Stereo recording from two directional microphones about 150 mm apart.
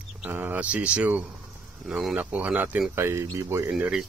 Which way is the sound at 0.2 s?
15° right (ahead or behind).